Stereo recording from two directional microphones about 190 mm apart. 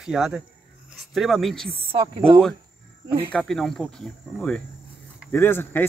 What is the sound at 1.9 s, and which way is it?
Speech, 25° right (ahead or behind).